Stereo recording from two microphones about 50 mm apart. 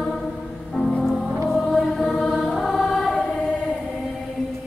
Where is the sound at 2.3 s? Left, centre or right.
Centre.